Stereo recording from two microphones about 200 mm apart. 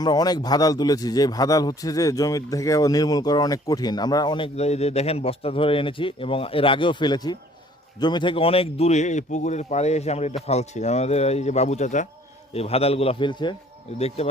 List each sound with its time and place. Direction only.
0.0 s a man's voice: 20° left (ahead or behind)